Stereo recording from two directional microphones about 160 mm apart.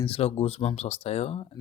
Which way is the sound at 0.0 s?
35° left (ahead or behind).